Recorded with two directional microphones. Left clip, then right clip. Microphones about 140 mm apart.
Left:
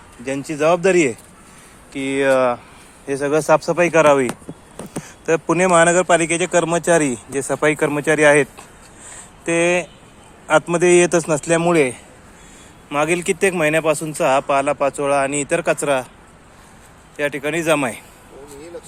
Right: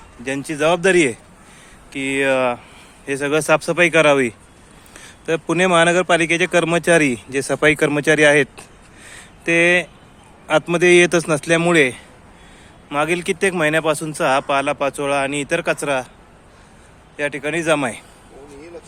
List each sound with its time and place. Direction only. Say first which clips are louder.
0.3 s speech: left 1 dB; 10° right (ahead or behind)
1.9 s a man's voice: left 1 dB; centre (ahead or behind)
3.1 s speech: left 1 dB; 15° right (ahead or behind)
4.9 s a sound: left 3 dB; 5° right (ahead or behind)
5.7 s speech: left 1 dB; 15° right (ahead or behind)
6.3 s speech: right 1 dB; 45° right (ahead or behind)
9.1 s a sound: right 3 dB; 40° right (ahead or behind)
9.6 s speech: right 2 dB; 15° right (ahead or behind)
12.9 s speech: left 1 dB; centre (ahead or behind)
17.2 s a man's voice: left 1 dB; centre (ahead or behind)